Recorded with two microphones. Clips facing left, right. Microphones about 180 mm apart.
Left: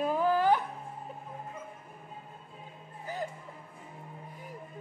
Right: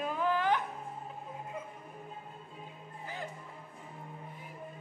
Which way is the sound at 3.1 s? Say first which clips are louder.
Left 7 dB; 40° left (ahead or behind).